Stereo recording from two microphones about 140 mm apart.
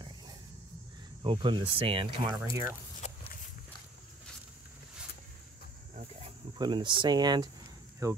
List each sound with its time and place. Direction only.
1.2 s speech: 35° right (ahead or behind)
2.3 s speech: 25° right (ahead or behind)
3.0 s walk: 55° left (ahead or behind)
6.6 s speech: 35° right (ahead or behind)